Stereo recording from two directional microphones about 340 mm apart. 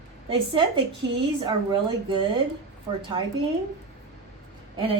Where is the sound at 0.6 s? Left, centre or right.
Centre.